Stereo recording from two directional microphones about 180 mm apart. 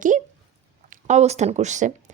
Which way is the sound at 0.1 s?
45° right (ahead or behind).